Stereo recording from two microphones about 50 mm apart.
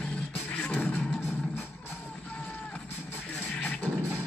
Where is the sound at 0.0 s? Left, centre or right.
Left.